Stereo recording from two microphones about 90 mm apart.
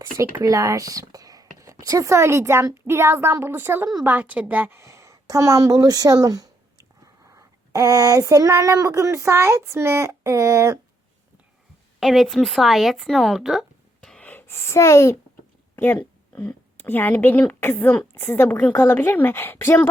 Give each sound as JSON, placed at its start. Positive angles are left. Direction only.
{"t": 0.0, "sound": "a woman's voice", "side_deg": -30}
{"t": 4.8, "sound": "a sound", "side_deg": -35}
{"t": 11.9, "sound": "speech", "side_deg": 0}
{"t": 14.0, "sound": "gasp", "side_deg": 10}
{"t": 14.3, "sound": "speech", "side_deg": 25}
{"t": 15.7, "sound": "a sound", "side_deg": 25}
{"t": 16.0, "sound": "a woman's voice", "side_deg": 15}